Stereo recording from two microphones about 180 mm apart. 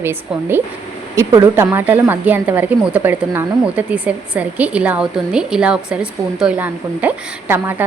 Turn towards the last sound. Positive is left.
turn(degrees=-10)  # may be behind; listen again after turning